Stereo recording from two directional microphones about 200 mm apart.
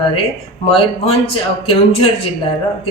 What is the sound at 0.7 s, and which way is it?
Speech, 25° left (ahead or behind).